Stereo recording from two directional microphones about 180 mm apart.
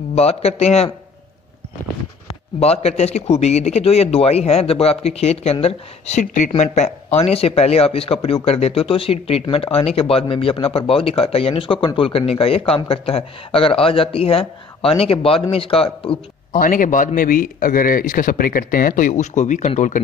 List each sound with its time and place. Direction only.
0.1 s speech: 35° left (ahead or behind)
2.2 s speech: 35° left (ahead or behind)
16.5 s a man's voice: 50° left (ahead or behind)